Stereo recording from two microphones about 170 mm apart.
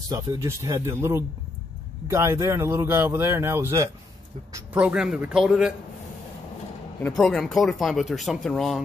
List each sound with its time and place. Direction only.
0.1 s speech: 20° right (ahead or behind)
4.7 s speech: 5° right (ahead or behind)
7.0 s speech: 5° left (ahead or behind)